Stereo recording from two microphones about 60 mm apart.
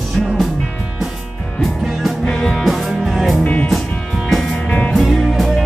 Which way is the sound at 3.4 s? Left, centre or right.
Left.